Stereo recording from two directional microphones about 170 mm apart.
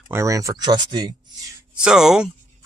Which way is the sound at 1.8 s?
5° right (ahead or behind).